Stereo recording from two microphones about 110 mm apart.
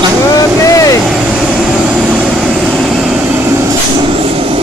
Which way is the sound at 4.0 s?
55° right (ahead or behind).